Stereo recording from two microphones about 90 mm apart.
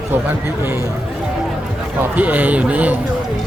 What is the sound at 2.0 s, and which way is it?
Speech, 15° right (ahead or behind).